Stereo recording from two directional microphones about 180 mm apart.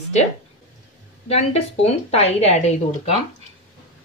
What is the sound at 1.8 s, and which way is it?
Speech, 35° left (ahead or behind).